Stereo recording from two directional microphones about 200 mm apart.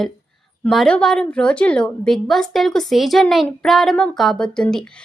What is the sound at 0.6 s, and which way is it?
A woman's voice, 5° left (ahead or behind).